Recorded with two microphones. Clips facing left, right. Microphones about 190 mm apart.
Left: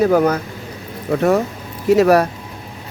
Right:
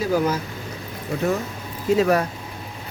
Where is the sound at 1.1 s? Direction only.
70° left (ahead or behind).